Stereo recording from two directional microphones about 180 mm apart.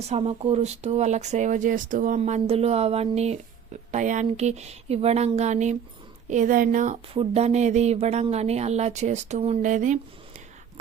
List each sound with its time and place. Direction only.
0.1 s speech: 35° right (ahead or behind)